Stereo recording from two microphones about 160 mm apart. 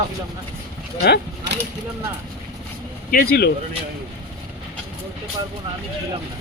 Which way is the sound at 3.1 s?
60° left (ahead or behind).